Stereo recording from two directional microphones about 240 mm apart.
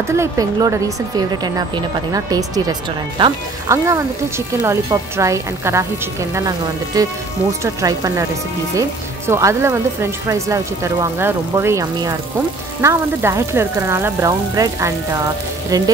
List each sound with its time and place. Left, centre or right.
0.1 s speech: centre
6.9 s speech: centre
9.3 s speech: centre